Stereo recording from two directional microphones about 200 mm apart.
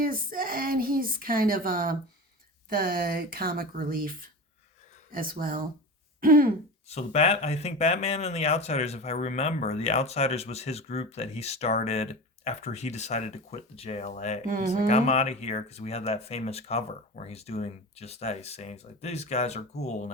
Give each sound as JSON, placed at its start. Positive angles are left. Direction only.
{"t": 0.0, "sound": "a woman's voice", "side_deg": -45}
{"t": 5.1, "sound": "a woman's voice", "side_deg": -45}
{"t": 6.1, "sound": "throat clearing", "side_deg": -45}
{"t": 6.8, "sound": "speech", "side_deg": 30}
{"t": 14.4, "sound": "a woman's voice", "side_deg": -45}
{"t": 14.8, "sound": "speech", "side_deg": 35}